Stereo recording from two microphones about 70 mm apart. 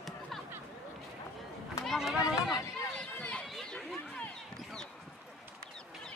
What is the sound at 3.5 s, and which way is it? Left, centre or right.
Chatter, centre.